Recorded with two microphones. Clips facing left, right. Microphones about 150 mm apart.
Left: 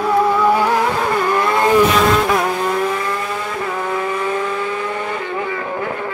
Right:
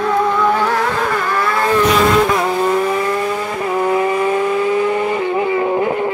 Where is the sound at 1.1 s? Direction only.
15° left (ahead or behind).